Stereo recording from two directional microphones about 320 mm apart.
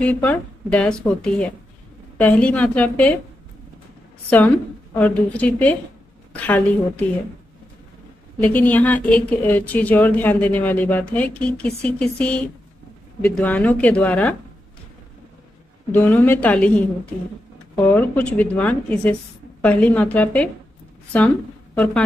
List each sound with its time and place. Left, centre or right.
0.0 s a woman's voice: centre
4.9 s a woman's voice: centre
8.4 s a woman's voice: centre
15.9 s a woman's voice: centre